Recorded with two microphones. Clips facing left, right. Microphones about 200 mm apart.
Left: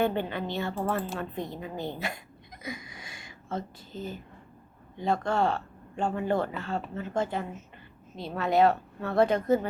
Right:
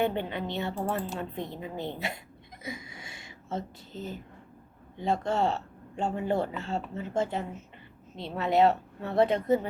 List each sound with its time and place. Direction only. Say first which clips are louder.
0.0 s speech: left 1 dB; 20° right (ahead or behind)